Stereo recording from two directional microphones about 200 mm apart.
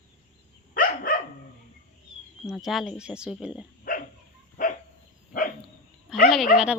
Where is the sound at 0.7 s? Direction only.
45° left (ahead or behind).